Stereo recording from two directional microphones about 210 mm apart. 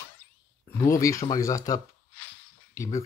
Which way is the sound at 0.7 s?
10° left (ahead or behind).